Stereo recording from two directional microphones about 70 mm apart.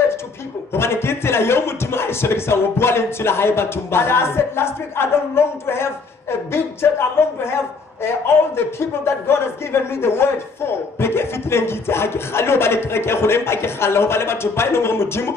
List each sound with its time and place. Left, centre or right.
0.7 s a man's voice: left
8.5 s a man's voice: left